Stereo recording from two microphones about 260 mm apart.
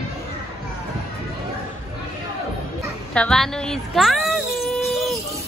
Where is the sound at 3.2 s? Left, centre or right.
Centre.